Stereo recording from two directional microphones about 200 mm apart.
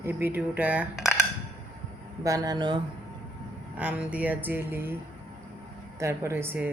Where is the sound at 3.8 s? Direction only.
5° right (ahead or behind).